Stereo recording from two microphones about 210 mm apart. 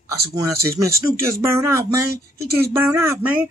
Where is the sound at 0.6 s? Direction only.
15° right (ahead or behind).